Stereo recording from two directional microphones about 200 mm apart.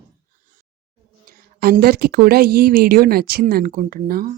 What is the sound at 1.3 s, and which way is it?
Speech, 45° right (ahead or behind).